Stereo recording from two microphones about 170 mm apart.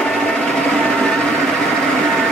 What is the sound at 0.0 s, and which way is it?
Vehicle, 5° left (ahead or behind).